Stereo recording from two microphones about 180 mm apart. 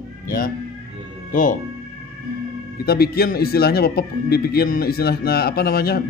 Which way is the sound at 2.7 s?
60° left (ahead or behind).